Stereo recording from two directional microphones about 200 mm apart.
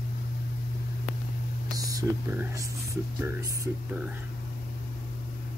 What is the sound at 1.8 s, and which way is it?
Speech, 15° right (ahead or behind).